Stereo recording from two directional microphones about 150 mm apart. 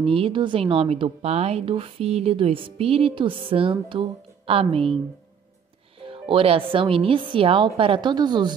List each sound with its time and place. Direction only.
0.0 s a woman's voice: 40° right (ahead or behind)
6.0 s a woman's voice: 35° right (ahead or behind)